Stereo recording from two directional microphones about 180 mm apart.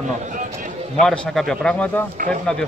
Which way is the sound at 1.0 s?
Centre (ahead or behind).